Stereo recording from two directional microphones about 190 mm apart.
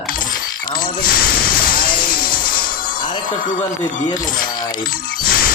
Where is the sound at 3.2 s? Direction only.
45° left (ahead or behind).